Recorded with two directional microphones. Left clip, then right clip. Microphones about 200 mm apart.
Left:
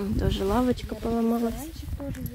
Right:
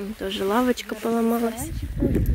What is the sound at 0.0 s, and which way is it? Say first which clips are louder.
Speech: even; 20° left (ahead or behind).